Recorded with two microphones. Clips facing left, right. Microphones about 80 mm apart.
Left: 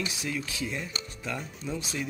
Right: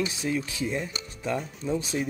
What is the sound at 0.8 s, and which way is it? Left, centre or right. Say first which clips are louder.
Music: right 3 dB; centre.